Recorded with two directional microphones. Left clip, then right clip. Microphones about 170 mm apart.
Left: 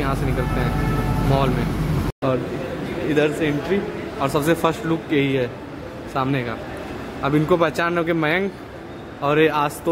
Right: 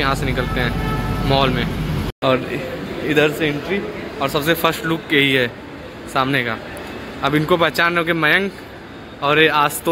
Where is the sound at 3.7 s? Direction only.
25° left (ahead or behind).